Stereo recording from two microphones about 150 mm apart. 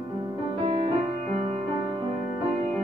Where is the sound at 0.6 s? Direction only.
40° right (ahead or behind).